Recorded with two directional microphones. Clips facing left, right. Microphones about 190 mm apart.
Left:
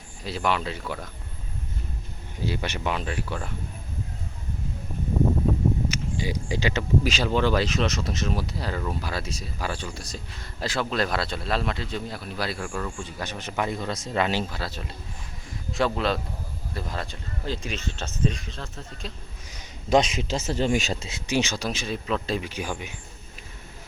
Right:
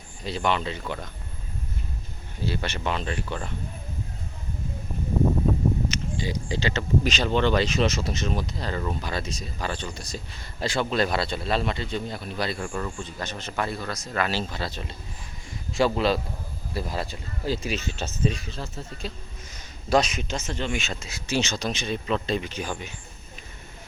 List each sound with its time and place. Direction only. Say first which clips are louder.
0.3 s speech: right 1 dB; 5° left (ahead or behind)
2.4 s speech: even; 15° left (ahead or behind)
5.9 s speech: left 1 dB; 10° left (ahead or behind)
13.0 s speech: even; 10° left (ahead or behind)
14.5 s speech: right 1 dB; 5° left (ahead or behind)
19.5 s a sound: left 1 dB; 25° left (ahead or behind)
20.3 s speech: left 6 dB; 35° left (ahead or behind)
21.2 s speech: left 1 dB; 15° left (ahead or behind)